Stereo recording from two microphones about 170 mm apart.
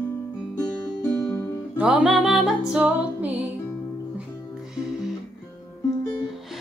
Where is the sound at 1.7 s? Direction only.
5° right (ahead or behind).